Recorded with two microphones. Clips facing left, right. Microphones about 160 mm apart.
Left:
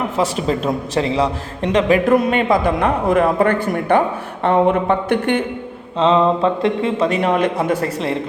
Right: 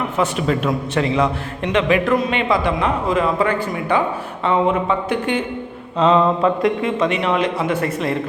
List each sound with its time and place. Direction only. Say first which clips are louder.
0.2 s speech: even; 35° left (ahead or behind)
2.1 s speech: left 4 dB; 60° left (ahead or behind)
2.4 s speech: left 3 dB; 50° left (ahead or behind)
6.0 s speech: left 1 dB; 25° left (ahead or behind)